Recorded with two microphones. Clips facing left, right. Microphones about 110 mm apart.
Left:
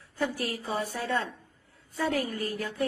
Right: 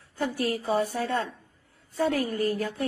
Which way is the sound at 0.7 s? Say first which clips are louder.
Right 4 dB; 40° right (ahead or behind).